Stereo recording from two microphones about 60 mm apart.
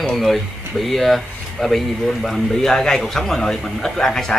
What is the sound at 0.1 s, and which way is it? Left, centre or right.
Speech, centre.